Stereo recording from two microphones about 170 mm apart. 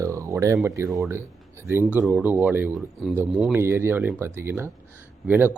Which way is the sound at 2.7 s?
Centre (ahead or behind).